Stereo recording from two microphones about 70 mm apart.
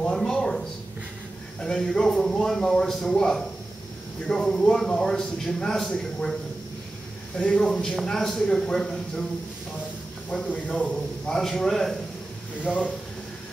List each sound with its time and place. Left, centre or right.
0.0 s a sound: centre
1.6 s speech: centre
7.3 s speech: centre
10.3 s speech: centre
12.6 s speech: centre